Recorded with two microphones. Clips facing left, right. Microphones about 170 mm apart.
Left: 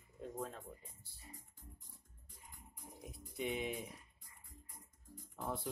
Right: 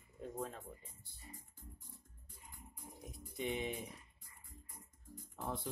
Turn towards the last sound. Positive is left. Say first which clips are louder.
# even
turn(degrees=0)  # may be behind; listen again after turning